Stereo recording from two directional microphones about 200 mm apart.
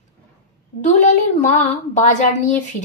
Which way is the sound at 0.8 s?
35° left (ahead or behind).